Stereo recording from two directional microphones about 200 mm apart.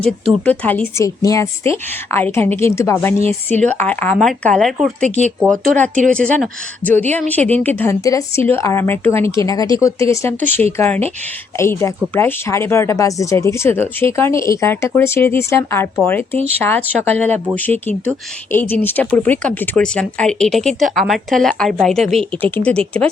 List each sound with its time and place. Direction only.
0.0 s speech: 5° left (ahead or behind)
5.0 s speech: 35° right (ahead or behind)
5.5 s speech: 5° left (ahead or behind)